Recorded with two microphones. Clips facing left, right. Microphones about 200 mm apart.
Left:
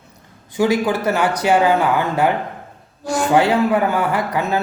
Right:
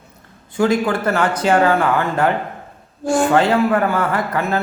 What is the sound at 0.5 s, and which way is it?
A man's voice, 15° left (ahead or behind).